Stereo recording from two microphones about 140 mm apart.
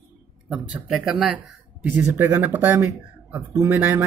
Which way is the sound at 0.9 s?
5° right (ahead or behind).